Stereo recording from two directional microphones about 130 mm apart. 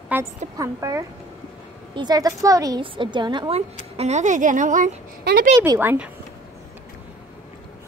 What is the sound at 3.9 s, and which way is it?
A woman's voice, 55° right (ahead or behind).